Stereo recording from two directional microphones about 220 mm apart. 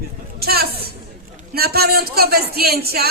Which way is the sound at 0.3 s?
45° right (ahead or behind).